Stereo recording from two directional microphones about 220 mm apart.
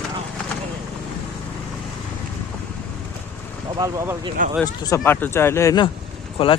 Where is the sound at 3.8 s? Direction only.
15° right (ahead or behind).